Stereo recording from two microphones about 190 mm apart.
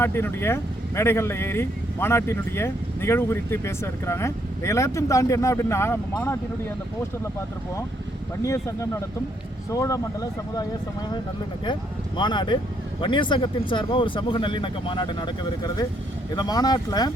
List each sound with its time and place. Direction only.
0.0 s speech: 10° left (ahead or behind)
8.4 s speech: 15° left (ahead or behind)